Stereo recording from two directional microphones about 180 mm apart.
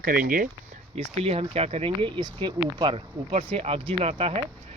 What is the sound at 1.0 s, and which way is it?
Speech, 35° right (ahead or behind).